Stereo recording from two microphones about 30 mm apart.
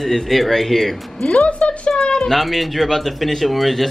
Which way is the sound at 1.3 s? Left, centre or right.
Left.